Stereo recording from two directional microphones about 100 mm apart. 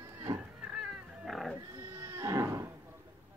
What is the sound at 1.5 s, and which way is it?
Sheep, 30° right (ahead or behind).